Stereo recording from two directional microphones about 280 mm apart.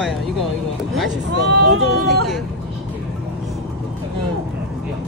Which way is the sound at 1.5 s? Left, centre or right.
Right.